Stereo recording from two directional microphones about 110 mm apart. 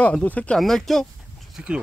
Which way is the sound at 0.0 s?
10° left (ahead or behind).